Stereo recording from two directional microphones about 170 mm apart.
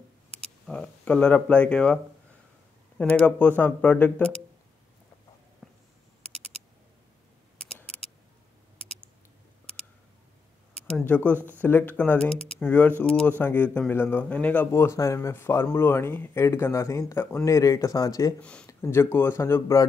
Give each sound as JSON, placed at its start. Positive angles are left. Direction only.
{"t": 0.4, "sound": "speech", "side_deg": 5}
{"t": 3.0, "sound": "speech", "side_deg": 10}
{"t": 5.6, "sound": "a sound", "side_deg": 0}
{"t": 10.9, "sound": "speech", "side_deg": 5}
{"t": 18.4, "sound": "speech", "side_deg": 5}